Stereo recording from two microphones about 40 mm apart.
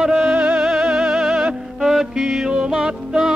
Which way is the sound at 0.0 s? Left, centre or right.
Centre.